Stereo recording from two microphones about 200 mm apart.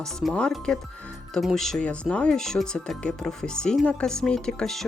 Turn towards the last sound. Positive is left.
turn(degrees=5)  # may be behind; listen again after turning